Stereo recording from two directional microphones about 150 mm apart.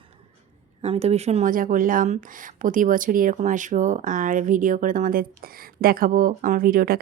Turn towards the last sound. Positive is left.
turn(degrees=-75)  # may be behind; listen again after turning